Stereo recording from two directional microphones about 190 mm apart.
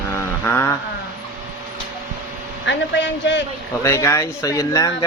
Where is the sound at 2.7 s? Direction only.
70° left (ahead or behind).